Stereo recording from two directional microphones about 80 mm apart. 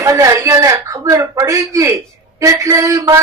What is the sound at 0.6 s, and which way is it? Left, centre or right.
Speech, right.